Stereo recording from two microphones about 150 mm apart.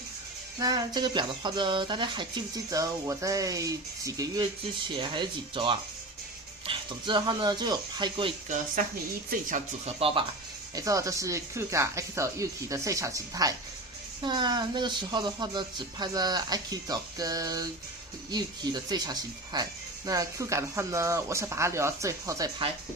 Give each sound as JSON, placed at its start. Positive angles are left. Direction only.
{"t": 0.6, "sound": "speech", "side_deg": -25}
{"t": 8.4, "sound": "speech", "side_deg": -60}
{"t": 9.8, "sound": "speech", "side_deg": -40}
{"t": 10.8, "sound": "speech", "side_deg": -20}